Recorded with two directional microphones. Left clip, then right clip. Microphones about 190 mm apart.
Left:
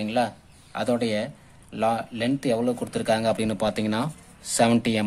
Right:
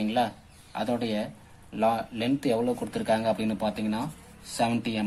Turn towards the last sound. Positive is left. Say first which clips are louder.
# left 6 dB
turn(degrees=40)  # may be behind; listen again after turning